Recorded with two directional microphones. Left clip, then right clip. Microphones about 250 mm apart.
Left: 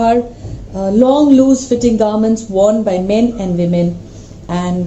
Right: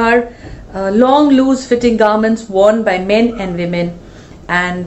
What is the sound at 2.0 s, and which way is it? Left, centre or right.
Speech, right.